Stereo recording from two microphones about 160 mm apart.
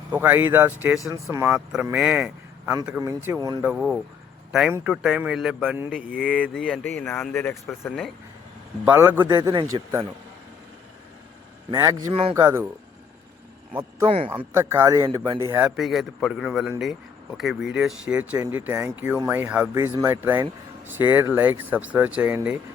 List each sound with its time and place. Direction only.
0.1 s speech: 10° right (ahead or behind)
1.7 s speech: 5° right (ahead or behind)
3.6 s speech: 5° right (ahead or behind)
8.8 s speech: 15° right (ahead or behind)
11.7 s speech: 20° right (ahead or behind)
14.3 s speech: 15° right (ahead or behind)
15.6 s speech: 5° right (ahead or behind)